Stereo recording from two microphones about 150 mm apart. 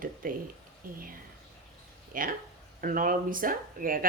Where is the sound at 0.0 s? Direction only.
65° right (ahead or behind).